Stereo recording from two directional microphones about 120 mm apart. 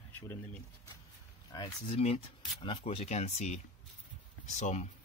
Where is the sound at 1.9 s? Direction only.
60° left (ahead or behind).